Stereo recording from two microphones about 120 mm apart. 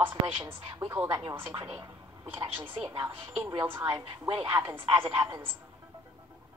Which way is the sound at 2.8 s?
35° right (ahead or behind).